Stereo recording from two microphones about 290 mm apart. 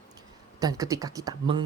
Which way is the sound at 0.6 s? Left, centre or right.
Centre.